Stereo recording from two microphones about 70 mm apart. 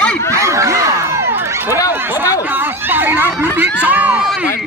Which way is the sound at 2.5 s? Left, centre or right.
Right.